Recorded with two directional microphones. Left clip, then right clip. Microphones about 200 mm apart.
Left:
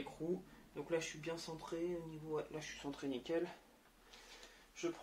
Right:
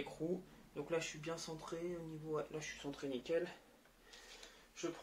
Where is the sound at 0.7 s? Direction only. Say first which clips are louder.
Even; 15° left (ahead or behind).